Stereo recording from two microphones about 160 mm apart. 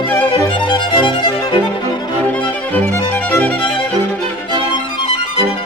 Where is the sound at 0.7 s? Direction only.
30° left (ahead or behind).